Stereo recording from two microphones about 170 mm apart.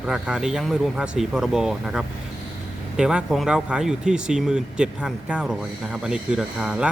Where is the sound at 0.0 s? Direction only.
5° right (ahead or behind).